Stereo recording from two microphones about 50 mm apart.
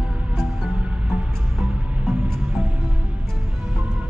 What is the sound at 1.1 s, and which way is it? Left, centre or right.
Music, right.